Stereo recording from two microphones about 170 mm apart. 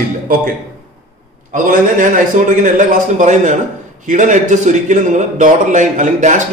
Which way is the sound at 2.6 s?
45° right (ahead or behind).